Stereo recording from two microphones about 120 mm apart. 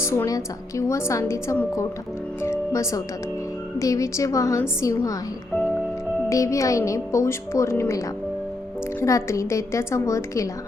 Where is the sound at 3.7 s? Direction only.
25° left (ahead or behind).